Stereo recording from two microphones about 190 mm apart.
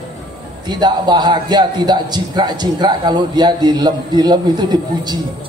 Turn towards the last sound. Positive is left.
turn(degrees=-20)  # may be behind; listen again after turning